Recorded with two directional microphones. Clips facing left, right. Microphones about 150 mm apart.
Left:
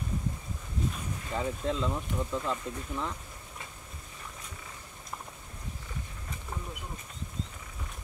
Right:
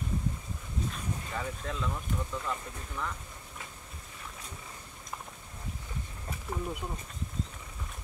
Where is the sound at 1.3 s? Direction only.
25° left (ahead or behind).